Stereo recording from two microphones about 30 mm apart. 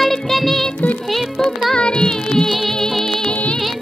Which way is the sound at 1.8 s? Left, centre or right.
Left.